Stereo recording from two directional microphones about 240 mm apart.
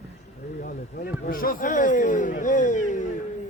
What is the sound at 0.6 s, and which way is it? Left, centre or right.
Speech, left.